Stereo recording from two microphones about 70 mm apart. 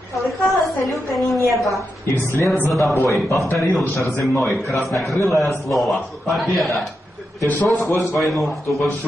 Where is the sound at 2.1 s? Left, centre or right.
Left.